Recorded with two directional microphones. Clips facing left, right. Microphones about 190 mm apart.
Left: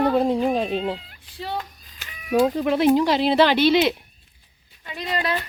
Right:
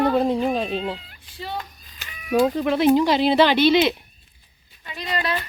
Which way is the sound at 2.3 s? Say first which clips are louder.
Even; 5° left (ahead or behind).